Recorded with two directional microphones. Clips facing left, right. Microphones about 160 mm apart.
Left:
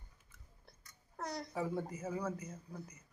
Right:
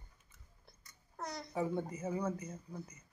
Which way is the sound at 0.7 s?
Centre (ahead or behind).